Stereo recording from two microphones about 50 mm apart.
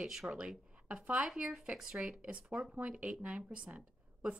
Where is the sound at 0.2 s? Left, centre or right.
Right.